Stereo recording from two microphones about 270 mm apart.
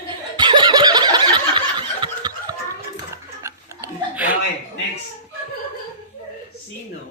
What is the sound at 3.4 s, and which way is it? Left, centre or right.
Chuckle, centre.